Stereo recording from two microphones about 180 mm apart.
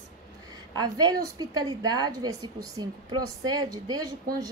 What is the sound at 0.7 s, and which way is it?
A woman's voice, 20° right (ahead or behind).